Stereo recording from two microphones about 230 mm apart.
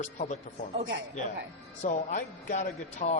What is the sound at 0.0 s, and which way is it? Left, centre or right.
Speech, left.